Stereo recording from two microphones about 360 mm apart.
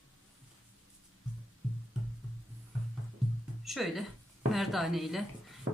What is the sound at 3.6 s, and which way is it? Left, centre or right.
A woman's voice, centre.